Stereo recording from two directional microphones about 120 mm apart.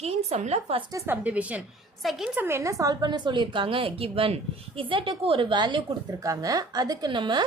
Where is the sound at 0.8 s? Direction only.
30° right (ahead or behind).